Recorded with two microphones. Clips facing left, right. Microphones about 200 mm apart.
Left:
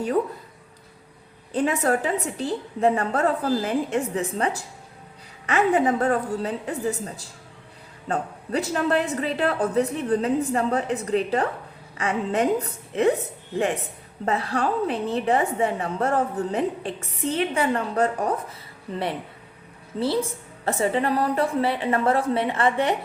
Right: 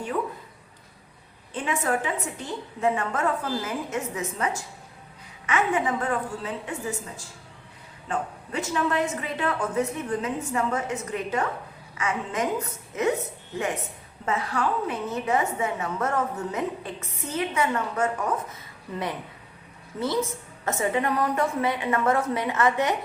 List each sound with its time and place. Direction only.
1.5 s a woman's voice: 40° left (ahead or behind)
14.3 s a woman's voice: 35° left (ahead or behind)